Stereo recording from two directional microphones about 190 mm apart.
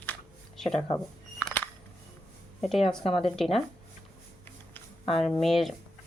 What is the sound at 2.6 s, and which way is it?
Speech, centre (ahead or behind).